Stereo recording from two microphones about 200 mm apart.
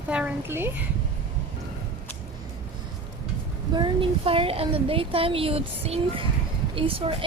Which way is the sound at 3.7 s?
25° right (ahead or behind).